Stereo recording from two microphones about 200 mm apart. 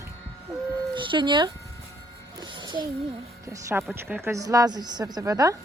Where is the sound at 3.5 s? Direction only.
10° right (ahead or behind).